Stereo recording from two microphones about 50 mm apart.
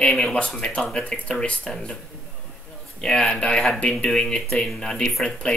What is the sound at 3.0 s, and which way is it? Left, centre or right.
Speech, centre.